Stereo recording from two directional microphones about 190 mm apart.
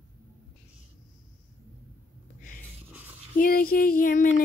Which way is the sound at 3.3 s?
50° left (ahead or behind).